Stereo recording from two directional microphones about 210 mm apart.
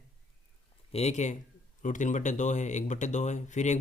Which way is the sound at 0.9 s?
30° left (ahead or behind).